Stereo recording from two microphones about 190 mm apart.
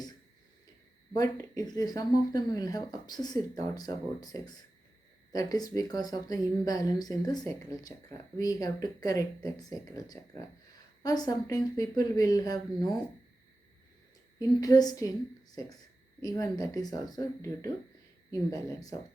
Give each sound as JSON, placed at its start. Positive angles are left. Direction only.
{"t": 1.1, "sound": "speech", "side_deg": 20}
{"t": 14.3, "sound": "speech", "side_deg": 20}